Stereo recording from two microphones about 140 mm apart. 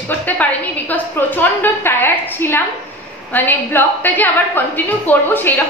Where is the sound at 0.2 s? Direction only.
10° left (ahead or behind).